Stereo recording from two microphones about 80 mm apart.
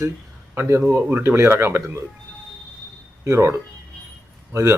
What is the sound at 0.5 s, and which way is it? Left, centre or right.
Speech, right.